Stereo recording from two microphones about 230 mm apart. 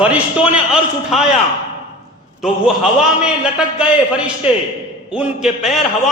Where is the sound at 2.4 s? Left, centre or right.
Centre.